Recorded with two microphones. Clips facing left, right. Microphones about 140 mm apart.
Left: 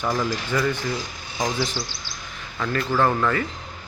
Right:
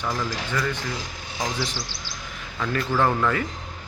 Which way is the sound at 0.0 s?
25° left (ahead or behind).